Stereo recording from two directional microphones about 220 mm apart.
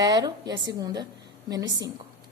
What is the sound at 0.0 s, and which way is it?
A woman's voice, 15° right (ahead or behind).